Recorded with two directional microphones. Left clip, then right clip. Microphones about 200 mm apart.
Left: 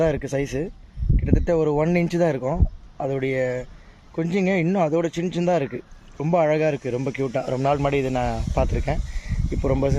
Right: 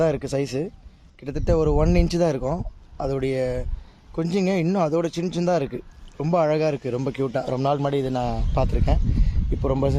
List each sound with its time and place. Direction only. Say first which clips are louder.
0.0 s speech: even; 10° right (ahead or behind)